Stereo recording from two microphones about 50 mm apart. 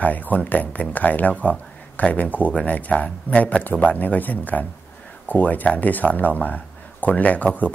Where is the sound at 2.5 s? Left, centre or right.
Centre.